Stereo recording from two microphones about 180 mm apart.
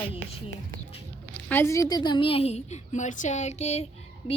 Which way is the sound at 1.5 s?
15° left (ahead or behind).